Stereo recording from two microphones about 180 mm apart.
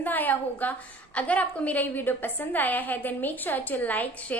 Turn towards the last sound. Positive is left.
turn(degrees=10)  # may be behind; listen again after turning